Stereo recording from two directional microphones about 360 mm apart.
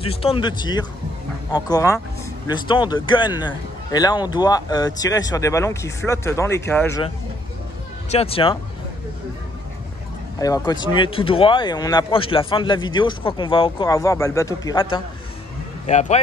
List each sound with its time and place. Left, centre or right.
0.0 s speech: centre
8.1 s speech: centre
10.4 s speech: centre